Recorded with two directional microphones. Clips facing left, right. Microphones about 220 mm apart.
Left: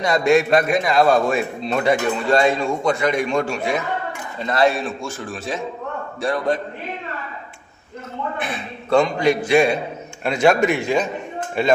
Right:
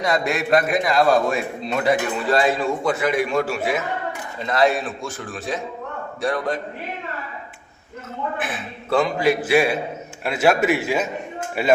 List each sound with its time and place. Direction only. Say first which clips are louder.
0.0 s a man's voice: left 6 dB; centre (ahead or behind)
4.8 s a man's voice: left 2 dB; 25° left (ahead or behind)
6.2 s a man's voice: left 2 dB; centre (ahead or behind)
8.4 s a man's voice: left 1 dB; 5° right (ahead or behind)